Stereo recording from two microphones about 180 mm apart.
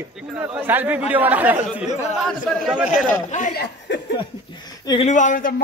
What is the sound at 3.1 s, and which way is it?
Speech, 45° left (ahead or behind).